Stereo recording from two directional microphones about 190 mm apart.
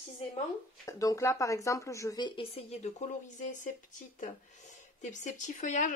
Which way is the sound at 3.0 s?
40° left (ahead or behind).